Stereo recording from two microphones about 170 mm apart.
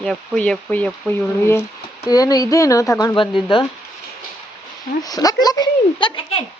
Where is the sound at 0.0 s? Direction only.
5° left (ahead or behind).